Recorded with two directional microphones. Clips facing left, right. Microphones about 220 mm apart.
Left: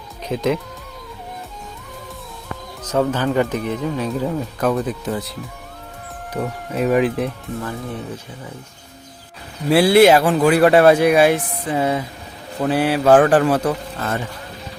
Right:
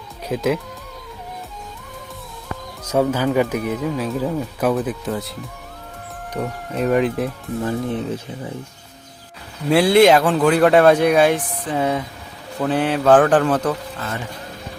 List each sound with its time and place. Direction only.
0.3 s speech: 5° right (ahead or behind)
2.8 s speech: 10° right (ahead or behind)
7.6 s speech: 20° right (ahead or behind)
9.6 s speech: 5° left (ahead or behind)